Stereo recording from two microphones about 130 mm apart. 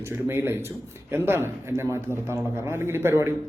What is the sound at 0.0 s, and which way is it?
Speech, 20° right (ahead or behind).